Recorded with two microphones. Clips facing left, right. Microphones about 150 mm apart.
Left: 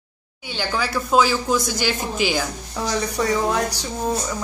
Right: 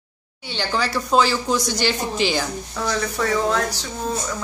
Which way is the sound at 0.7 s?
10° left (ahead or behind).